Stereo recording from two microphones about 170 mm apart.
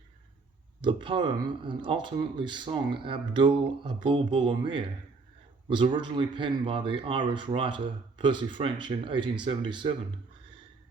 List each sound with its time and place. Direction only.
0.8 s speech: 30° right (ahead or behind)